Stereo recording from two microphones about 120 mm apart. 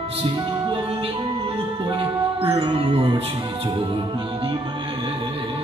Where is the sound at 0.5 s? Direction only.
45° right (ahead or behind).